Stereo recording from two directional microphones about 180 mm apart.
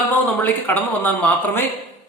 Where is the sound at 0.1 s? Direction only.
10° left (ahead or behind).